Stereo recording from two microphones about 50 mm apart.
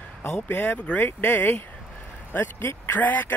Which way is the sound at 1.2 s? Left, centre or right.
Left.